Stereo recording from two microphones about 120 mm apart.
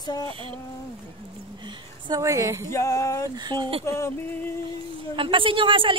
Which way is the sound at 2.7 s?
25° left (ahead or behind).